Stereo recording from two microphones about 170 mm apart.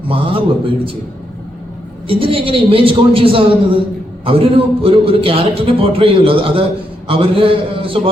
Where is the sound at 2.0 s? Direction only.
30° right (ahead or behind).